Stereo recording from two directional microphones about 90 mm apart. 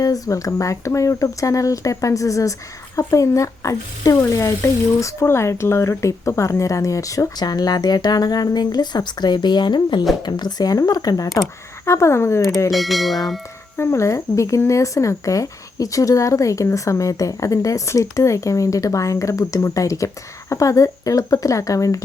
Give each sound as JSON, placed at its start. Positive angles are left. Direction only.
{"t": 0.0, "sound": "speech", "side_deg": 40}
{"t": 11.9, "sound": "speech", "side_deg": 30}
{"t": 12.7, "sound": "speech", "side_deg": 0}
{"t": 13.7, "sound": "speech", "side_deg": 30}